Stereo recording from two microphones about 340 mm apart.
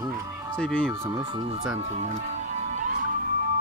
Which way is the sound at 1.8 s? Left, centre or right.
Centre.